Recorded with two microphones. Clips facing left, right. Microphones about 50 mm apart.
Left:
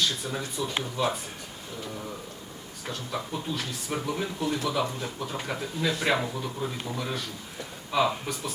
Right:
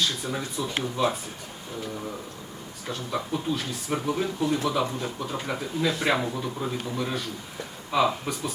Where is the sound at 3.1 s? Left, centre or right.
Centre.